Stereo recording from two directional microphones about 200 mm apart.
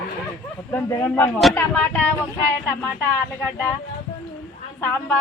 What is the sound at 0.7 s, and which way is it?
Speech, 10° left (ahead or behind).